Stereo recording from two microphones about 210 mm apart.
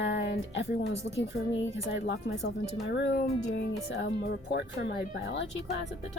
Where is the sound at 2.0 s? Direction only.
60° left (ahead or behind).